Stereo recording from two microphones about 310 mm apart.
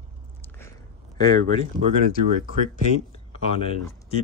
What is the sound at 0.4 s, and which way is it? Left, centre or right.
Biting, centre.